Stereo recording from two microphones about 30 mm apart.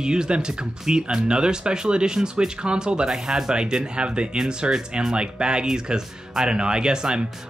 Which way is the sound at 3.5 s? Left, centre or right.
Right.